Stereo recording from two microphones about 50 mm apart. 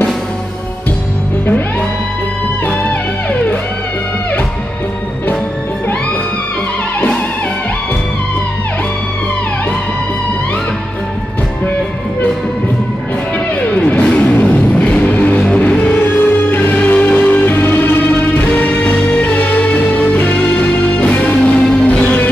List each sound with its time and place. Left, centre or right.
2.6 s music: left
13.7 s music: left